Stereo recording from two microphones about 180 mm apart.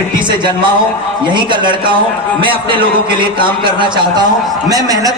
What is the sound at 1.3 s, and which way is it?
A man's voice, 25° right (ahead or behind).